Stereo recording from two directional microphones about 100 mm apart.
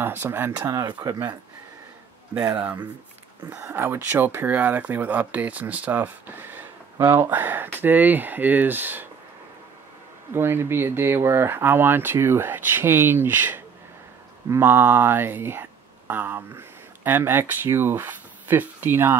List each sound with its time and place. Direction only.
0.0 s speech: 20° right (ahead or behind)
0.7 s speech: 35° right (ahead or behind)
3.7 s speech: 20° right (ahead or behind)
10.3 s speech: 25° right (ahead or behind)